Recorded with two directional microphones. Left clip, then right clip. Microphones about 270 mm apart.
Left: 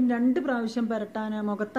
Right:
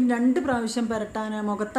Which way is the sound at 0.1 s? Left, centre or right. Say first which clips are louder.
Right 3 dB; centre.